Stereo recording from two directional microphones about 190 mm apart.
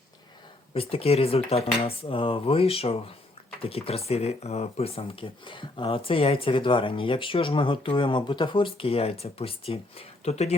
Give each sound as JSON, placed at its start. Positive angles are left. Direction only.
{"t": 0.7, "sound": "speech", "side_deg": 30}